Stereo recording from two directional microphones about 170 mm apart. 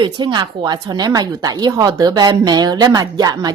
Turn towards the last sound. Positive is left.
turn(degrees=-20)  # may be behind; listen again after turning